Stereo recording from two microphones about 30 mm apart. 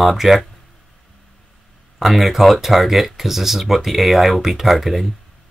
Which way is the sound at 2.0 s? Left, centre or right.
Centre.